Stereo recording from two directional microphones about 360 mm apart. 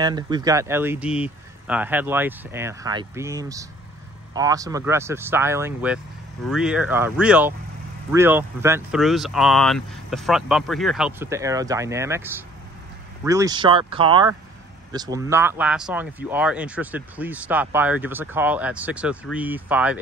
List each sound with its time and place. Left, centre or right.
0.0 s speech: centre